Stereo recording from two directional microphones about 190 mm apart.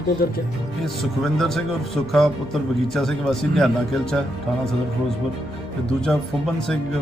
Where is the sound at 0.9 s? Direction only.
Centre (ahead or behind).